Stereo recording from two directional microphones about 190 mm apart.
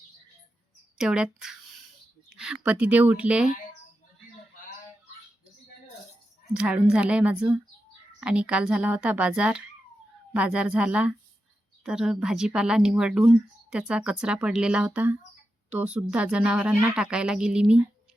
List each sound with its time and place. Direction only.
0.9 s speech: 5° right (ahead or behind)
6.5 s speech: 5° right (ahead or behind)